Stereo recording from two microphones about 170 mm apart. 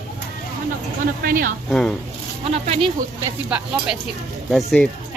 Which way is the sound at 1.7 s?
5° left (ahead or behind).